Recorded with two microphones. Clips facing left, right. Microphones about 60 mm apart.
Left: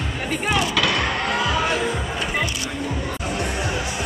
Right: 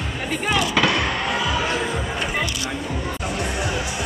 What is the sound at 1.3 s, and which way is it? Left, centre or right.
Music, left.